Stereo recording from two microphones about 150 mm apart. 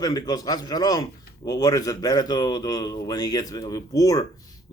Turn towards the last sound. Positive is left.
turn(degrees=25)  # may be behind; listen again after turning